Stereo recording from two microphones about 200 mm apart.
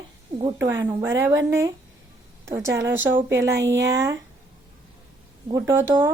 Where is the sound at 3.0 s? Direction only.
70° right (ahead or behind).